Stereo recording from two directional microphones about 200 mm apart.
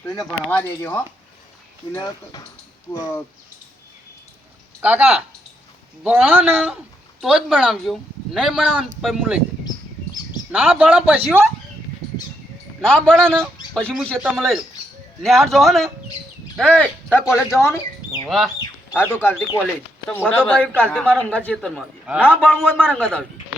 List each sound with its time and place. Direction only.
0.2 s speech: 10° left (ahead or behind)
4.8 s a man's voice: 5° right (ahead or behind)
10.5 s a man's voice: 5° right (ahead or behind)
12.8 s speech: 5° left (ahead or behind)
18.3 s speech: centre (ahead or behind)
18.6 s speech: 10° left (ahead or behind)